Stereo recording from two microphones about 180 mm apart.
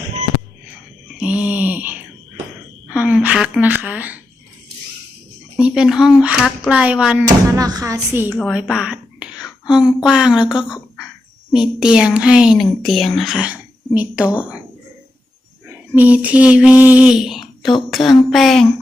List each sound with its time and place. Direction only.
1.2 s a sound: 5° right (ahead or behind)
2.9 s a woman's voice: 5° right (ahead or behind)
5.5 s a woman's voice: 5° right (ahead or behind)
7.5 s speech: 20° right (ahead or behind)
8.4 s a woman's voice: centre (ahead or behind)
16.0 s a woman's voice: 10° right (ahead or behind)